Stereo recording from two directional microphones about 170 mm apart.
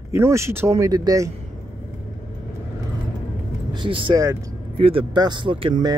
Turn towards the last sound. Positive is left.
turn(degrees=-25)  # may be behind; listen again after turning